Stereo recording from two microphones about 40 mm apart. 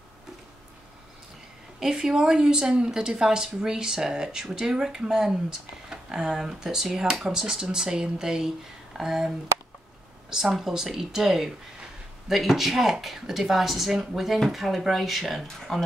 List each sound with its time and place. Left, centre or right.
1.8 s speech: centre
10.3 s speech: centre
15.4 s speech: centre